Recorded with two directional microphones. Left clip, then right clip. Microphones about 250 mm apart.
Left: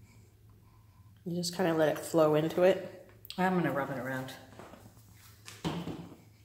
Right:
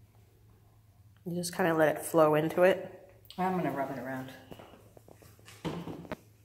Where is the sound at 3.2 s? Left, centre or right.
Left.